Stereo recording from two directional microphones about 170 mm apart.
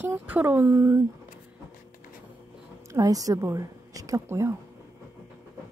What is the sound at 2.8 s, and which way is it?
A woman's voice, 20° right (ahead or behind).